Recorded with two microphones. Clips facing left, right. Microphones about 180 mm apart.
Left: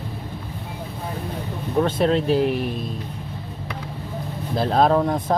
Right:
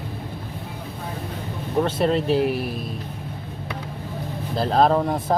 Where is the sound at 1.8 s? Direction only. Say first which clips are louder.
Left 1 dB; 5° right (ahead or behind).